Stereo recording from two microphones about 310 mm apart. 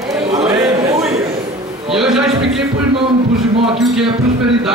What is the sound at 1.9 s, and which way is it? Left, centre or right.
Speech, centre.